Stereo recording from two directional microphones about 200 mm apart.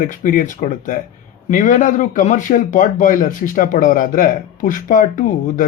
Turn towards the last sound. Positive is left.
turn(degrees=40)  # may be behind; listen again after turning